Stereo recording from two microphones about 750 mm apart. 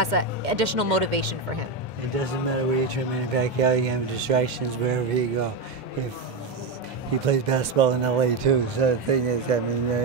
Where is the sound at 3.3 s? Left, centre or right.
Right.